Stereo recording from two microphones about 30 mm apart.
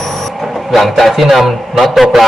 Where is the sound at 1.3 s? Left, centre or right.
Centre.